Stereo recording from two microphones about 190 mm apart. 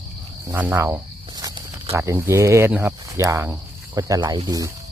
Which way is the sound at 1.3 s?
20° right (ahead or behind).